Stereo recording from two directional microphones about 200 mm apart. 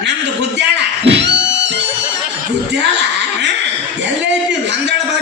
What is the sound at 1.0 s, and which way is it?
Thunk, 60° right (ahead or behind).